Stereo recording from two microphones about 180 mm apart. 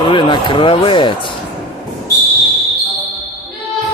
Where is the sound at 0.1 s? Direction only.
25° left (ahead or behind).